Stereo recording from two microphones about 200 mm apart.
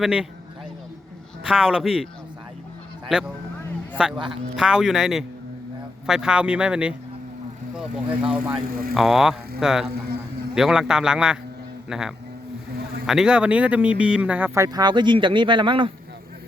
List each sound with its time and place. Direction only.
0.0 s speech: 5° right (ahead or behind)
1.5 s speech: 5° right (ahead or behind)
3.1 s speech: 5° right (ahead or behind)
8.6 s speech: 45° right (ahead or behind)
9.0 s a man's voice: centre (ahead or behind); by 15.9 s 25° right (ahead or behind)